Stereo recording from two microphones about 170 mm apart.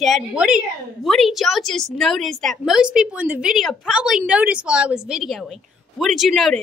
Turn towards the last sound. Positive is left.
turn(degrees=0)  # may be behind; listen again after turning